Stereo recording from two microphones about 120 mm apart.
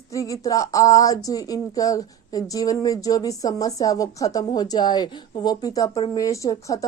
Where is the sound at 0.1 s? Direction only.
30° left (ahead or behind).